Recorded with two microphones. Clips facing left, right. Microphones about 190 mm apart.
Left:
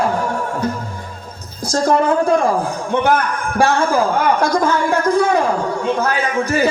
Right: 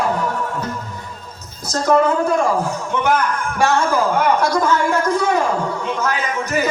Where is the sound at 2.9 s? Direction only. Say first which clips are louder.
Left 3 dB; 35° left (ahead or behind).